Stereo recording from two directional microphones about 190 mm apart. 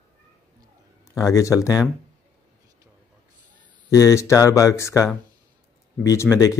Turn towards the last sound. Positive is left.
turn(degrees=15)  # may be behind; listen again after turning